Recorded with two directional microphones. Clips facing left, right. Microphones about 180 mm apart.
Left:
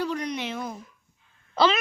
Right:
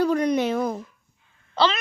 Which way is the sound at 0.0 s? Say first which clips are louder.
Right 8 dB; 50° right (ahead or behind).